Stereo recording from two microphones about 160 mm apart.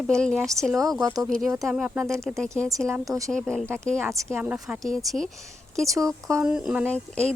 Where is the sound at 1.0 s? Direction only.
25° right (ahead or behind).